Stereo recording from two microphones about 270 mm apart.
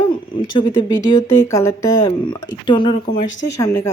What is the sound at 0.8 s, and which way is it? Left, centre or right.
Speech, centre.